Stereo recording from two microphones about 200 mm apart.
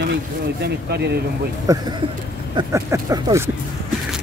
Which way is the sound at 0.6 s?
50° right (ahead or behind).